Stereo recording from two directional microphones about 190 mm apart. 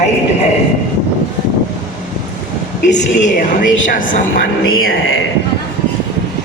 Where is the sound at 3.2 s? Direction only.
45° left (ahead or behind).